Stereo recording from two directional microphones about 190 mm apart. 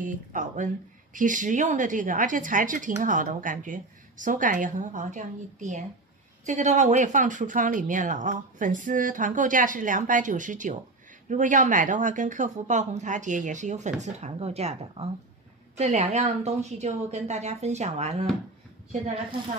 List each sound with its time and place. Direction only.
0.0 s speech: 40° right (ahead or behind)